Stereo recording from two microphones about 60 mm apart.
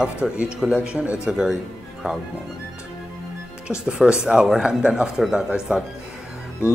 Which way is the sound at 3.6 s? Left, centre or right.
Centre.